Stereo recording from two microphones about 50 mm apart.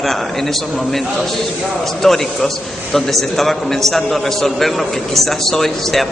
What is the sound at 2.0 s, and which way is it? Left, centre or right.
A man's voice, centre.